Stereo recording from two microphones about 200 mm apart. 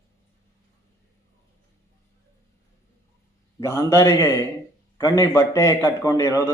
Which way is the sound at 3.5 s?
15° left (ahead or behind).